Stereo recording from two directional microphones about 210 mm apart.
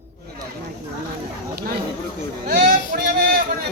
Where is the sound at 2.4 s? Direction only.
45° right (ahead or behind).